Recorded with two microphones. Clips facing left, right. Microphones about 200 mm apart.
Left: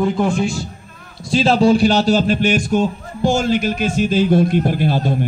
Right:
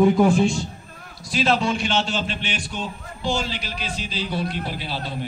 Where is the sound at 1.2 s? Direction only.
30° left (ahead or behind).